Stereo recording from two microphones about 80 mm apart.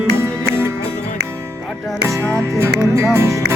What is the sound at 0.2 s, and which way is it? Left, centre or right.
Music, right.